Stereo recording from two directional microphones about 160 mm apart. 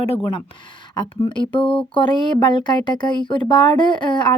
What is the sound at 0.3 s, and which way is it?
A woman's voice, 30° left (ahead or behind).